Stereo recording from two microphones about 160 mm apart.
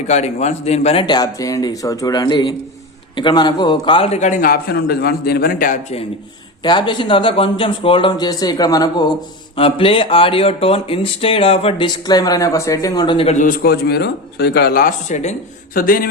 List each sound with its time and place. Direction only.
0.1 s a man's voice: 45° left (ahead or behind)
1.0 s speech: 25° left (ahead or behind)
4.2 s a man's voice: 55° left (ahead or behind)
6.6 s speech: 30° left (ahead or behind); by 15.4 s 45° left (ahead or behind)
15.7 s speech: 65° left (ahead or behind)